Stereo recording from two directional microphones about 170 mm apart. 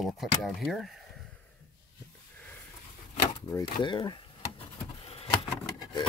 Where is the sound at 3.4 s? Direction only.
25° left (ahead or behind).